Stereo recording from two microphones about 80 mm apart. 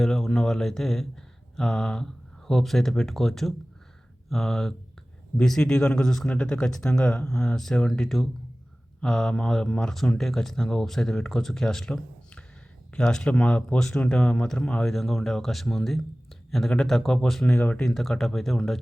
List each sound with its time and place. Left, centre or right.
0.0 s speech: centre
17.5 s speech: left
17.7 s speech: centre